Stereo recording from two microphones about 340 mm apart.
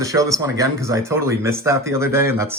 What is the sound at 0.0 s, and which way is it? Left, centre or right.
Speech, centre.